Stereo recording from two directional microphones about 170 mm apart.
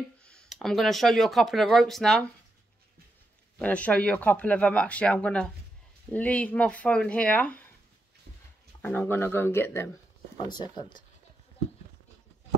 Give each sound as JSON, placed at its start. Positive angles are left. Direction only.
{"t": 0.2, "sound": "speech", "side_deg": 5}
{"t": 3.5, "sound": "speech", "side_deg": 10}
{"t": 8.8, "sound": "speech", "side_deg": 10}
{"t": 10.3, "sound": "speech", "side_deg": 25}